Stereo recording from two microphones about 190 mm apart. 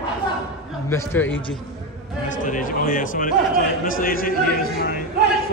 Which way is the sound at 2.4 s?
45° left (ahead or behind).